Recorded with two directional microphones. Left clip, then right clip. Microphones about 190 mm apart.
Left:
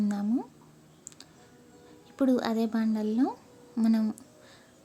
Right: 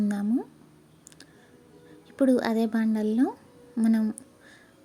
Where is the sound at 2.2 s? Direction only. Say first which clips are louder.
Right 3 dB; 10° right (ahead or behind).